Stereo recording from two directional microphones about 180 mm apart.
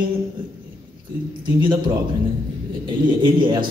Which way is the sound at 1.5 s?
25° right (ahead or behind).